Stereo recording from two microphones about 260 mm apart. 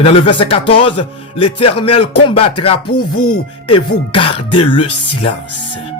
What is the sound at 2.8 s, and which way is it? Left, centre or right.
Speech, left.